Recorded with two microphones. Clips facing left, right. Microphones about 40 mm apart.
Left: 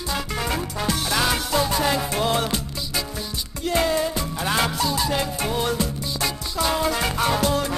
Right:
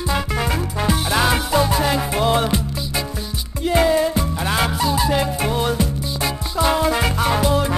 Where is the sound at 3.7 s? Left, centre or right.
Centre.